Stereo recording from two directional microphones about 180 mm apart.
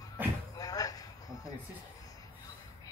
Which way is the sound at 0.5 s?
20° left (ahead or behind).